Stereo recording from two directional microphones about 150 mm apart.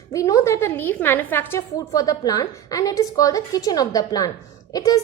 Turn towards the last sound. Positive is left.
turn(degrees=25)  # may be behind; listen again after turning